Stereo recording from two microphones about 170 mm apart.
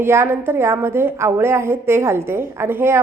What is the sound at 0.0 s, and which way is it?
A woman's voice, 15° right (ahead or behind).